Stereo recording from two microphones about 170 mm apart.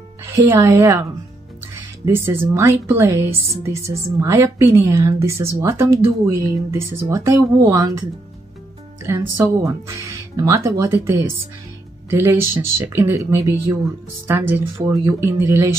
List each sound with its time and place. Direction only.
0.2 s speech: 15° right (ahead or behind)
2.0 s a woman's voice: 15° right (ahead or behind)
9.0 s a woman's voice: 15° right (ahead or behind)